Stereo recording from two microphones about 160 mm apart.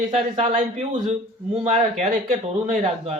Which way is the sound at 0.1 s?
40° right (ahead or behind).